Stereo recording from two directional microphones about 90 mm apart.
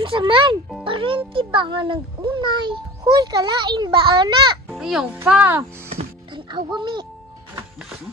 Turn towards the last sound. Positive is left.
turn(degrees=-60)  # may be behind; listen again after turning